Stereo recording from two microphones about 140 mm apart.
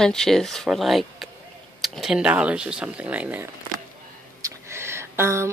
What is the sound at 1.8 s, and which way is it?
Speech, 5° right (ahead or behind).